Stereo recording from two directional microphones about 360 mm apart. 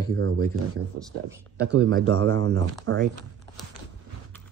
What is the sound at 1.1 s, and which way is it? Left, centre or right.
Speech, centre.